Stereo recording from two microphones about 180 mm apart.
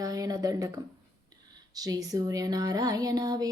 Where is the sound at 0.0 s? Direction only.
20° right (ahead or behind).